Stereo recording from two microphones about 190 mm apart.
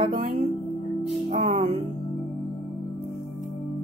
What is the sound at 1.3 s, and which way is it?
Music, 35° right (ahead or behind).